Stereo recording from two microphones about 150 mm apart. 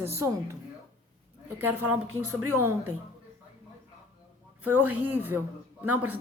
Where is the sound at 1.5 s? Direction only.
15° right (ahead or behind).